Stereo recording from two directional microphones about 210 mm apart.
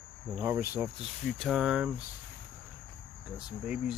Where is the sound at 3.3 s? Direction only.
5° right (ahead or behind).